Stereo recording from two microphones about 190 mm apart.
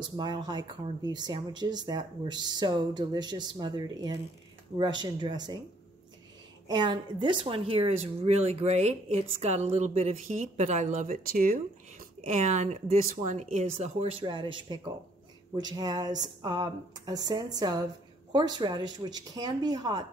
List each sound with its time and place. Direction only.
0.2 s speech: 20° right (ahead or behind)
6.7 s a woman's voice: 20° right (ahead or behind)